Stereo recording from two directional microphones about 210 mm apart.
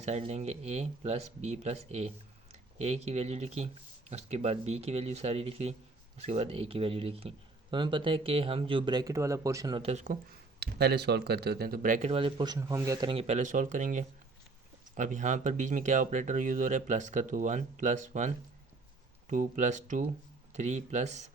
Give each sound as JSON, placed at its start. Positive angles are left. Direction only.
{"t": 0.0, "sound": "speech", "side_deg": -30}
{"t": 10.6, "sound": "speech", "side_deg": -50}